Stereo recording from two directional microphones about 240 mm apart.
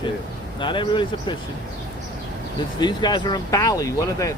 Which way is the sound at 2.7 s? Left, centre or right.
Centre.